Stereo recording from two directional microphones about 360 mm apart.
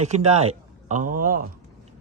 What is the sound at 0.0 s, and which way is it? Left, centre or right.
Speech, centre.